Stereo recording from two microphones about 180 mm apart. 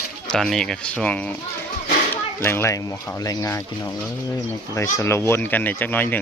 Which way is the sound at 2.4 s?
15° left (ahead or behind).